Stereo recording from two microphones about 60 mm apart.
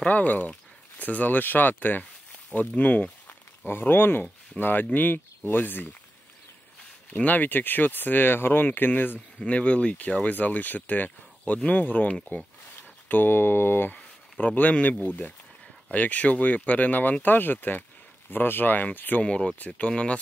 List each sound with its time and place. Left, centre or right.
0.0 s speech: left
3.3 s speech: left
7.1 s speech: left
9.5 s speech: centre; by 13.9 s left
14.4 s speech: left
19.2 s speech: centre